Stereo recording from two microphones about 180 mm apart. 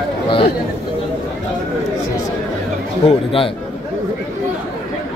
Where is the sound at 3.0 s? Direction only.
30° left (ahead or behind).